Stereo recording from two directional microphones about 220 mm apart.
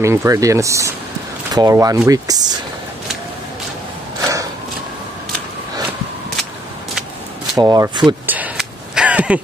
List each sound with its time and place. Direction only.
0.0 s speech: 15° right (ahead or behind)
7.5 s speech: 15° right (ahead or behind)
8.3 s a sound: 5° right (ahead or behind)